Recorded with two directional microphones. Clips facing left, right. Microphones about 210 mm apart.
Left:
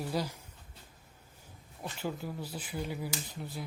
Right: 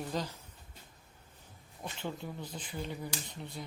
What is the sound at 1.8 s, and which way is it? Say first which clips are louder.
Speech: left 2 dB; 5° left (ahead or behind).